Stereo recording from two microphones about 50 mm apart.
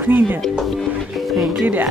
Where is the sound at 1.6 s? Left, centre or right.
Right.